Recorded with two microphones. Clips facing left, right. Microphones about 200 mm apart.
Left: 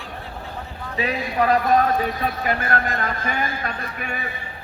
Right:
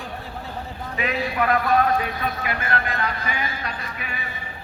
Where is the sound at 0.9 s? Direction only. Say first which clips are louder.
Left 2 dB; 35° left (ahead or behind); by 4.2 s 50° left (ahead or behind).